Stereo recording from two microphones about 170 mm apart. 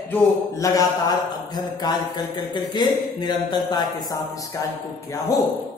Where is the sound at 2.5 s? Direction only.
25° left (ahead or behind).